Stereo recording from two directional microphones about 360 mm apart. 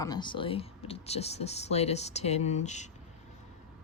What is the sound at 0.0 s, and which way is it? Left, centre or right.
Speech, centre.